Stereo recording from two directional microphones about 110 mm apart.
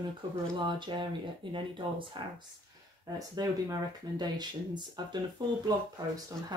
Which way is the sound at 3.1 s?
35° right (ahead or behind).